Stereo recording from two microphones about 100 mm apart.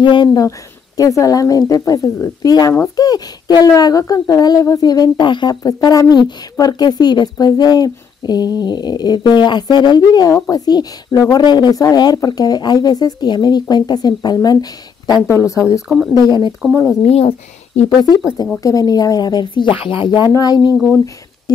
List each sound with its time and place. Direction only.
0.0 s speech: 50° left (ahead or behind)
0.4 s speech: 35° left (ahead or behind)
15.2 s speech: 30° left (ahead or behind)
16.1 s speech: 45° left (ahead or behind)
17.0 s speech: 90° left
18.6 s speech: 35° left (ahead or behind); by 20.2 s 50° left (ahead or behind)
20.2 s speech: 40° left (ahead or behind)